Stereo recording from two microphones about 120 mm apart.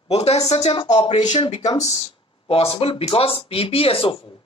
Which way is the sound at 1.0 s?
40° left (ahead or behind).